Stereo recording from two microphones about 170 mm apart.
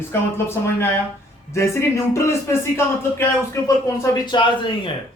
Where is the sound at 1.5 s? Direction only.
15° left (ahead or behind).